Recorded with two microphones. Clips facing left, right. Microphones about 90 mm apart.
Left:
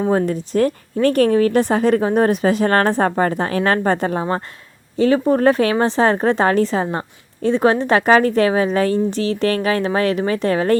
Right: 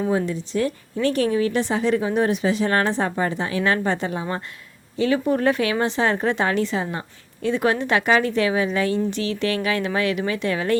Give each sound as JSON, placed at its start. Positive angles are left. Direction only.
{"t": 0.0, "sound": "a woman's voice", "side_deg": 50}